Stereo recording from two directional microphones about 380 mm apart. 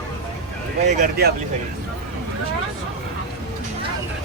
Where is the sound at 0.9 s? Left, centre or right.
Right.